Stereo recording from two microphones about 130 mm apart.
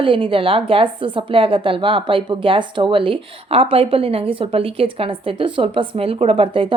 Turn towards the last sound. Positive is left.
turn(degrees=-45)  # may be behind; listen again after turning